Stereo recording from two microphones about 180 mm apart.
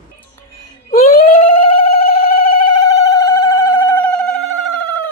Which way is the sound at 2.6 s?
20° left (ahead or behind).